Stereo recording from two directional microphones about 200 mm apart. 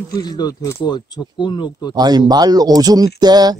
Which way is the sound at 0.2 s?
20° left (ahead or behind).